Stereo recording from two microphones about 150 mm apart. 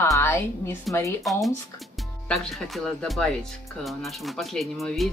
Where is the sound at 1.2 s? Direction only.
Centre (ahead or behind).